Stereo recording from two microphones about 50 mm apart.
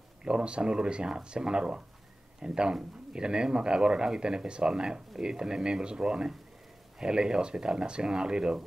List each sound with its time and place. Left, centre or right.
0.2 s speech: centre